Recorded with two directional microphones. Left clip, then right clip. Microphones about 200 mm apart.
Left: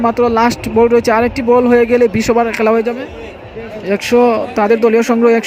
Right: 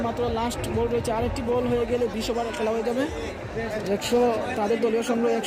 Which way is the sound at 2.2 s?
35° left (ahead or behind).